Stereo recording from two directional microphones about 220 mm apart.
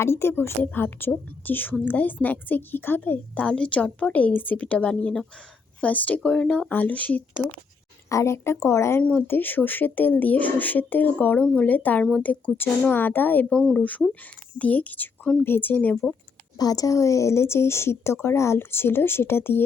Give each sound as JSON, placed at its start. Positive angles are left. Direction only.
{"t": 0.0, "sound": "speech", "side_deg": 10}
{"t": 16.6, "sound": "speech", "side_deg": 15}